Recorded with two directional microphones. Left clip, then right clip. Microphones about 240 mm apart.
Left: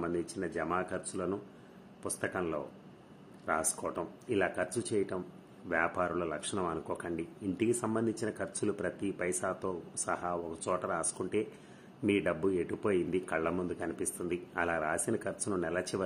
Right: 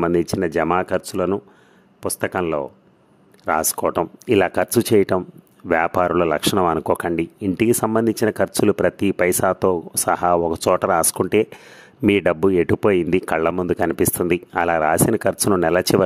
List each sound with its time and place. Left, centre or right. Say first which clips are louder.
0.0 s speech: right 17 dB; right